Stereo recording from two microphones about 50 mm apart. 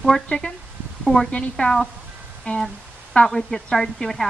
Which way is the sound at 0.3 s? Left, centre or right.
Left.